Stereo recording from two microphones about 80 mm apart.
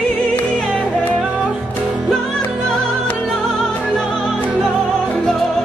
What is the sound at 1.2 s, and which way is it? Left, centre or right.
Music, centre.